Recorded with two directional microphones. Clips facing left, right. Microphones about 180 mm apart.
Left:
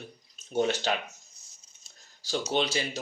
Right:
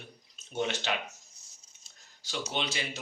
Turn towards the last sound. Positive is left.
turn(degrees=35)  # may be behind; listen again after turning